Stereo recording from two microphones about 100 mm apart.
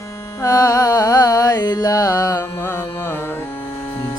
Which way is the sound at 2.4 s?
20° left (ahead or behind).